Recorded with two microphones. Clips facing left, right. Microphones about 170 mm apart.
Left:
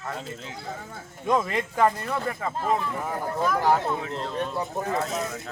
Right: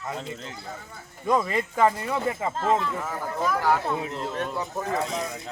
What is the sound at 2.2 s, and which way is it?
Speech, 20° right (ahead or behind).